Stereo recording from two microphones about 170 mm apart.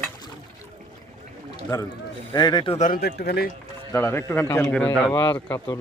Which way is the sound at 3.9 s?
15° left (ahead or behind).